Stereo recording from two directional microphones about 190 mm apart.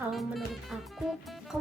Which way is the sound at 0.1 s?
Centre (ahead or behind).